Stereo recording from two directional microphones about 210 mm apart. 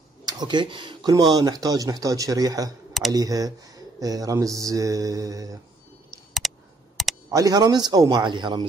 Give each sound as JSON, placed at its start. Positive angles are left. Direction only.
{"t": 0.2, "sound": "speech", "side_deg": -20}
{"t": 6.4, "sound": "a sound", "side_deg": 0}
{"t": 7.2, "sound": "a man's voice", "side_deg": -15}